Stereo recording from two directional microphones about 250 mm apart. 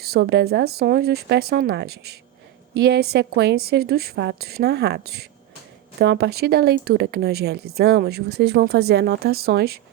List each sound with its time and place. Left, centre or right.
0.0 s speech: right